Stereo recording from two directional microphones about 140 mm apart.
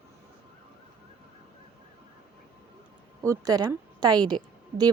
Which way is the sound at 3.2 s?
25° right (ahead or behind).